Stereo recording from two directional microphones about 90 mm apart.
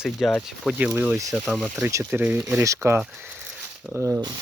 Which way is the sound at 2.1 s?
15° right (ahead or behind).